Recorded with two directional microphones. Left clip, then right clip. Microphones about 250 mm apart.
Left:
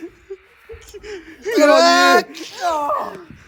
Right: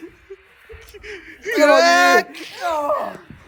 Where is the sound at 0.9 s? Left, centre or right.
Centre.